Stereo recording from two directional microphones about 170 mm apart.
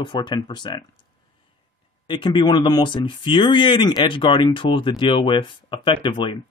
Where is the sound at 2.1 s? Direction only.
30° left (ahead or behind).